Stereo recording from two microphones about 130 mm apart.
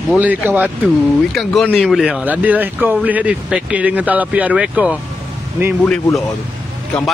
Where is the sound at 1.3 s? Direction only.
5° left (ahead or behind).